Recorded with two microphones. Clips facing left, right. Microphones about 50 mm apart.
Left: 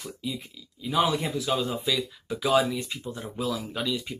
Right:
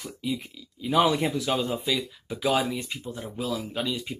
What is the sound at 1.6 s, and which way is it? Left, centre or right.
Speech, right.